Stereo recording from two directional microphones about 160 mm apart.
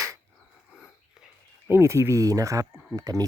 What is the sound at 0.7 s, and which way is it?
Whispering, 5° right (ahead or behind).